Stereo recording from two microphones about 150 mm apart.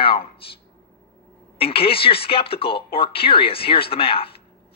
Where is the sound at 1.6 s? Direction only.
40° left (ahead or behind).